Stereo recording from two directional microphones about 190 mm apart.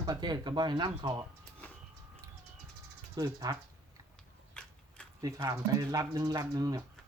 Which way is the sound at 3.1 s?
20° right (ahead or behind).